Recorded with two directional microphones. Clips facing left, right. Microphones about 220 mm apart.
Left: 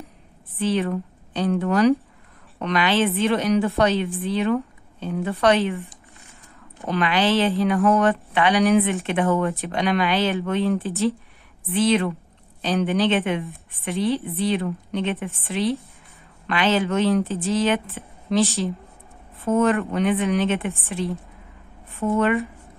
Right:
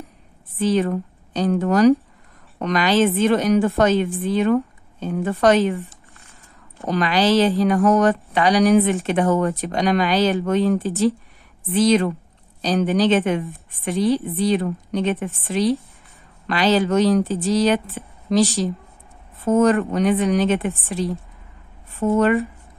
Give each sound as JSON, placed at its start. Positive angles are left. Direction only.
{"t": 0.6, "sound": "a woman's voice", "side_deg": -45}
{"t": 5.8, "sound": "a sound", "side_deg": 15}
{"t": 6.9, "sound": "a woman's voice", "side_deg": -40}
{"t": 18.0, "sound": "a sound", "side_deg": -40}
{"t": 19.3, "sound": "speech", "side_deg": -45}
{"t": 22.0, "sound": "speech", "side_deg": -20}